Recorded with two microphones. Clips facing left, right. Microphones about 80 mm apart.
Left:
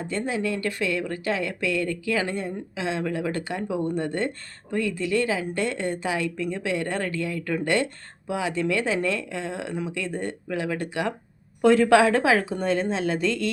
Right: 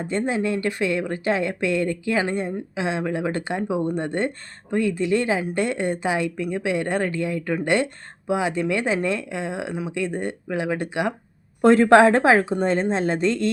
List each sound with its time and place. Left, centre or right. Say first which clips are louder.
0.0 s speech: right 4 dB; right
11.6 s a woman's voice: right 4 dB; right